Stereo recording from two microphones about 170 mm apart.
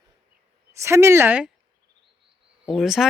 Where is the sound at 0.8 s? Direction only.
15° right (ahead or behind).